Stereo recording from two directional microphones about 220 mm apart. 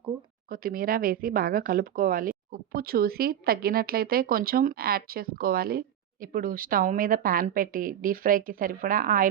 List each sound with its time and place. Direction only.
0.5 s speech: 40° right (ahead or behind)